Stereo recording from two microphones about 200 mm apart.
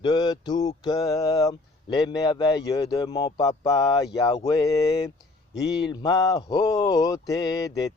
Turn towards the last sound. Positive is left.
turn(degrees=20)  # may be behind; listen again after turning